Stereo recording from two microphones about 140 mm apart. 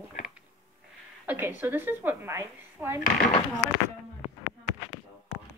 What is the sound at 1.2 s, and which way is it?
A woman's voice, 15° right (ahead or behind).